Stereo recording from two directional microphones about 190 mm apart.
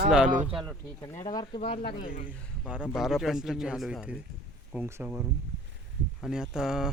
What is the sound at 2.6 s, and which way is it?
Speech, 5° right (ahead or behind).